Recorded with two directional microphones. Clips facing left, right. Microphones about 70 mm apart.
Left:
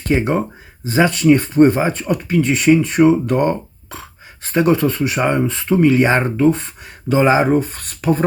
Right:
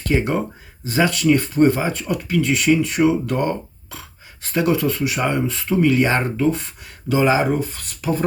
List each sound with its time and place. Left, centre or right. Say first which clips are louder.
0.1 s speech: left 3 dB; left